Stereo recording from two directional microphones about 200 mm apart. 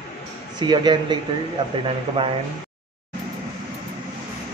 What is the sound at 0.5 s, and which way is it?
Speech, 20° right (ahead or behind).